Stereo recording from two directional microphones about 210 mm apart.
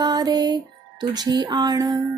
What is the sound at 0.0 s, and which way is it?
Music, 20° right (ahead or behind).